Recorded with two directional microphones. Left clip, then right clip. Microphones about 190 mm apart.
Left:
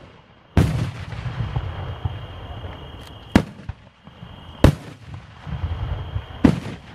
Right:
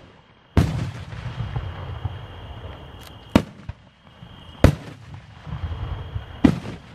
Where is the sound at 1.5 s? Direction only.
35° right (ahead or behind).